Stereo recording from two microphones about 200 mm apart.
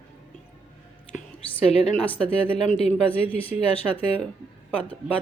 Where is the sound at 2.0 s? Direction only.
5° left (ahead or behind).